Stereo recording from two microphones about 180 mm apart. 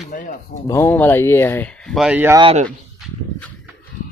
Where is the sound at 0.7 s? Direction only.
10° left (ahead or behind); by 2.3 s 10° right (ahead or behind).